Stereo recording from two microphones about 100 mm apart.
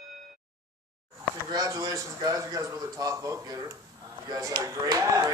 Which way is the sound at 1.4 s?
35° right (ahead or behind).